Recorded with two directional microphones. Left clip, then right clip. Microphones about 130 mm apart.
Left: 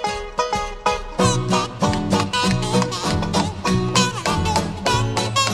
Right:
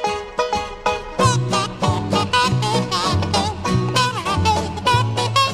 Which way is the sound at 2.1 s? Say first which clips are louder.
Right 6 dB; 40° right (ahead or behind).